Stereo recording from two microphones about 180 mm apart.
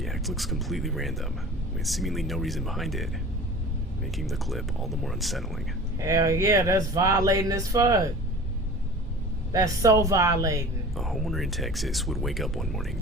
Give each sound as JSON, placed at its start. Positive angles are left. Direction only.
{"t": 0.0, "sound": "speech", "side_deg": 0}
{"t": 6.0, "sound": "speech", "side_deg": -15}
{"t": 9.5, "sound": "a woman's voice", "side_deg": -20}
{"t": 10.9, "sound": "speech", "side_deg": 0}